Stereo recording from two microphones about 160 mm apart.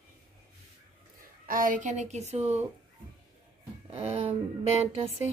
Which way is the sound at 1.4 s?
60° right (ahead or behind).